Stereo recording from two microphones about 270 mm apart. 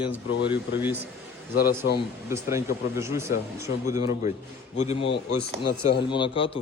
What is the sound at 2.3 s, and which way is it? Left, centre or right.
Speech, centre.